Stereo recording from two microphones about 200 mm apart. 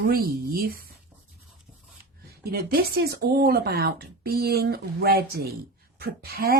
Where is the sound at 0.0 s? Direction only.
50° right (ahead or behind).